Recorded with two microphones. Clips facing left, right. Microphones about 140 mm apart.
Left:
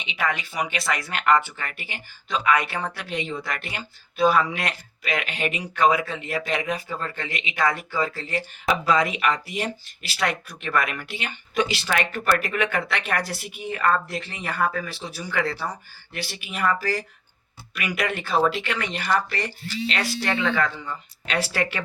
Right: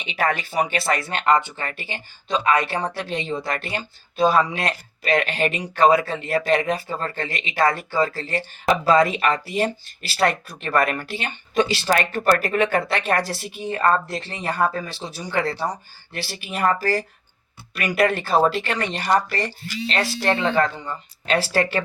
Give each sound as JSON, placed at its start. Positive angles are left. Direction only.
{"t": 0.1, "sound": "speech", "side_deg": -40}
{"t": 17.7, "sound": "speech", "side_deg": -35}